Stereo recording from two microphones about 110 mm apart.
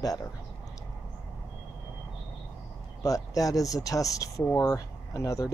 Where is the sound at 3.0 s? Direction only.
30° left (ahead or behind).